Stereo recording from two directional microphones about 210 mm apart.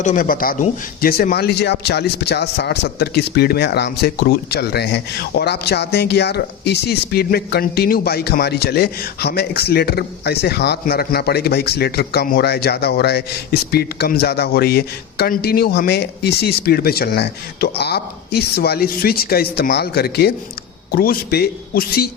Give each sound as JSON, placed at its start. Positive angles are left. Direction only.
{"t": 0.0, "sound": "a man's voice", "side_deg": 40}